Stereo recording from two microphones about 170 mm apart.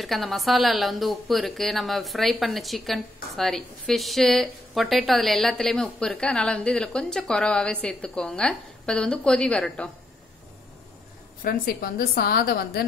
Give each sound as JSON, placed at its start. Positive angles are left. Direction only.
{"t": 0.0, "sound": "a woman's voice", "side_deg": 0}
{"t": 11.4, "sound": "a woman's voice", "side_deg": 60}